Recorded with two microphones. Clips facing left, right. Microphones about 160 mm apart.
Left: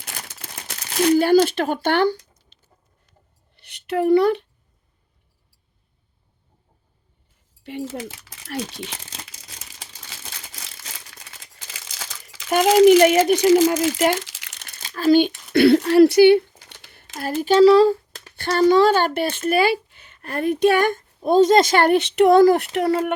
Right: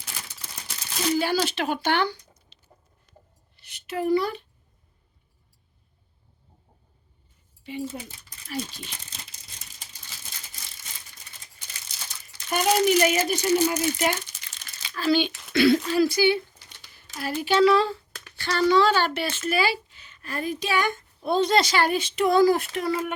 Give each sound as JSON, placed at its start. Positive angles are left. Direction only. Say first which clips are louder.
{"t": 0.0, "sound": "crumpling", "louder": "left 4 dB", "side_deg": 60}
{"t": 3.5, "sound": "a sound", "louder": "left 8 dB", "side_deg": 60}
{"t": 7.6, "sound": "crumpling", "louder": "left 4 dB", "side_deg": 70}
{"t": 14.8, "sound": "speech", "louder": "left 7 dB", "side_deg": 45}
{"t": 15.5, "sound": "speech", "louder": "left 7 dB", "side_deg": 60}
{"t": 16.7, "sound": "a sound", "louder": "left 5 dB", "side_deg": 55}
{"t": 17.2, "sound": "speech", "louder": "left 6 dB", "side_deg": 45}
{"t": 18.3, "sound": "speech", "louder": "left 5 dB", "side_deg": 50}